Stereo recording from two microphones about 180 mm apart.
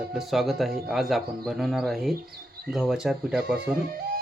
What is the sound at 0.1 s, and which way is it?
Speech, centre (ahead or behind).